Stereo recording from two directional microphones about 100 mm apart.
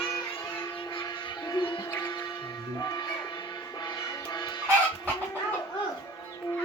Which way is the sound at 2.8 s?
40° left (ahead or behind).